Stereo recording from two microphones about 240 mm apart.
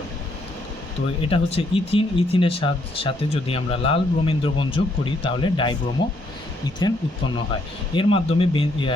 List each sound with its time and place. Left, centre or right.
1.2 s speech: left
6.8 s speech: centre